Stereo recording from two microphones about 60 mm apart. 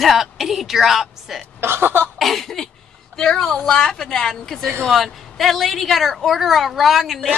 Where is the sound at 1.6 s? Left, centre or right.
Right.